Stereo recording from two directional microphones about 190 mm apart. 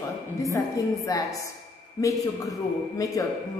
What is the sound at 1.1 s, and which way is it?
A woman's voice, 20° left (ahead or behind).